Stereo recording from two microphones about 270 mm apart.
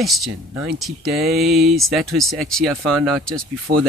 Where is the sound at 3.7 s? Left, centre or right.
Right.